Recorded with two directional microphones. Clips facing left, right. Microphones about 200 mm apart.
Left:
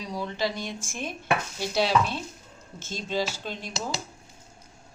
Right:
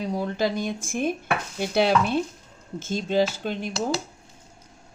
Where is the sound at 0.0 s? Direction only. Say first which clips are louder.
Right 5 dB; 50° right (ahead or behind).